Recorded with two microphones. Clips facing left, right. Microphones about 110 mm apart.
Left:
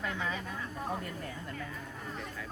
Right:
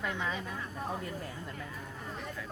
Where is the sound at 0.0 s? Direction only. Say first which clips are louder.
Right 1 dB; 20° right (ahead or behind).